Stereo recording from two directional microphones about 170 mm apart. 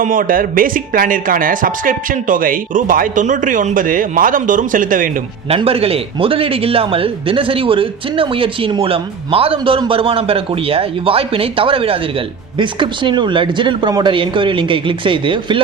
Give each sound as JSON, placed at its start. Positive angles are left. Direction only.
{"t": 0.0, "sound": "speech", "side_deg": -55}
{"t": 5.5, "sound": "a man's voice", "side_deg": -35}